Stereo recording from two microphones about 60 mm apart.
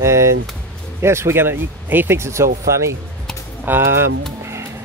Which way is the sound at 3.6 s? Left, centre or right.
Right.